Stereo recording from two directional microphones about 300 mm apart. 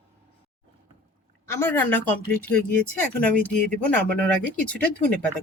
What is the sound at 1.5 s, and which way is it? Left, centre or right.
A woman's voice, centre.